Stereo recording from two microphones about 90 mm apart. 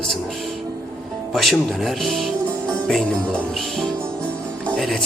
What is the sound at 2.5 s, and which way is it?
Music, 10° left (ahead or behind).